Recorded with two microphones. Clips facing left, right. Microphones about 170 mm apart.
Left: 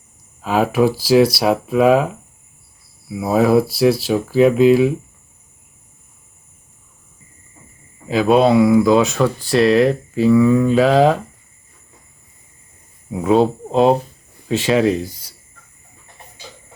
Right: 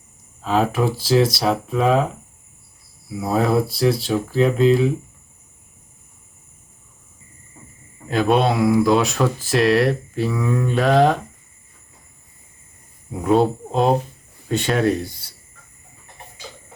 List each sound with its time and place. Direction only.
0.4 s speech: 10° left (ahead or behind)
3.2 s speech: 10° left (ahead or behind)
8.0 s speech: centre (ahead or behind)
13.2 s speech: centre (ahead or behind)